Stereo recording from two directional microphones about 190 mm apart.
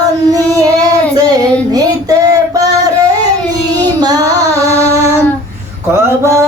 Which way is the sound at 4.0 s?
20° right (ahead or behind).